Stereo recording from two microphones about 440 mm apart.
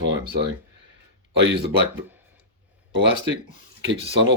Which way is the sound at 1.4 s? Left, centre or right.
Right.